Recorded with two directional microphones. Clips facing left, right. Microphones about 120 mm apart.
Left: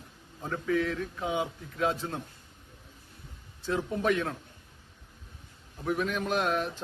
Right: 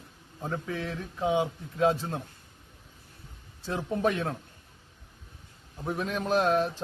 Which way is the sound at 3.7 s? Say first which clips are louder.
Even; 30° right (ahead or behind).